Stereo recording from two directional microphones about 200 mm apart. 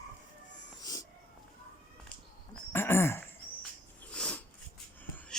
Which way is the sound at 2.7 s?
10° left (ahead or behind).